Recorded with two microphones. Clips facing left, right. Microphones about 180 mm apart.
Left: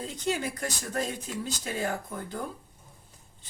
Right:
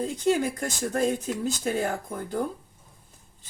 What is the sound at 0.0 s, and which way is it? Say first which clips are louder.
Speech: right 7 dB; 45° right (ahead or behind).